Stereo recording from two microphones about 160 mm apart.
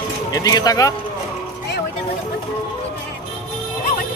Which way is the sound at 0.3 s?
25° left (ahead or behind).